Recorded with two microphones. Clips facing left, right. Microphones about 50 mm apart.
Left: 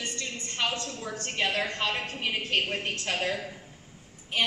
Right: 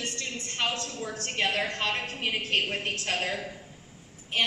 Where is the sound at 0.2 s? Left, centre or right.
Centre.